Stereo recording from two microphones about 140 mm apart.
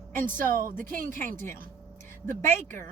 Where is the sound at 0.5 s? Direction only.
80° right.